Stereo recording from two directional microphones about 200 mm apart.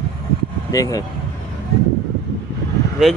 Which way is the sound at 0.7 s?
15° left (ahead or behind).